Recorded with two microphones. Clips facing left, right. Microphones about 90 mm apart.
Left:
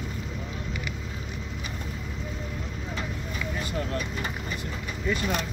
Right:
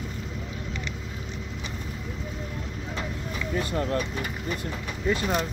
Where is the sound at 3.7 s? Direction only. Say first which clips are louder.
Right 3 dB; 45° right (ahead or behind).